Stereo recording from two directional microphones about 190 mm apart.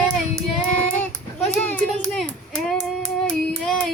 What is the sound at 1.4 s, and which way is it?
Child singing, 5° left (ahead or behind).